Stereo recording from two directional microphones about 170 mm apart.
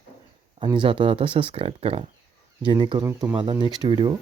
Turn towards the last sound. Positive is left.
turn(degrees=-25)  # may be behind; listen again after turning